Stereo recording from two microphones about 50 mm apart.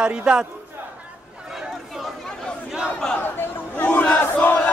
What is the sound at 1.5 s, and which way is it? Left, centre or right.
Chatter, centre.